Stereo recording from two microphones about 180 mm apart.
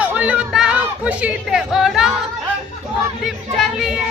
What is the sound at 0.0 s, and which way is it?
Music, 5° right (ahead or behind).